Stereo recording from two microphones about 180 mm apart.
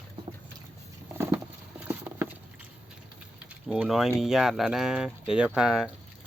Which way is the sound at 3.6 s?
5° right (ahead or behind).